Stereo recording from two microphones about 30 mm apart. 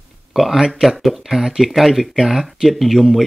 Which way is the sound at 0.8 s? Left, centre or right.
Centre.